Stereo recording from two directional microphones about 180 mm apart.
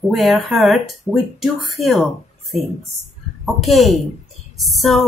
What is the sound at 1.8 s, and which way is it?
Speech, 35° left (ahead or behind).